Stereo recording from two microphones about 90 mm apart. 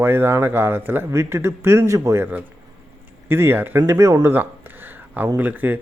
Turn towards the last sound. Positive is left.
turn(degrees=-20)  # may be behind; listen again after turning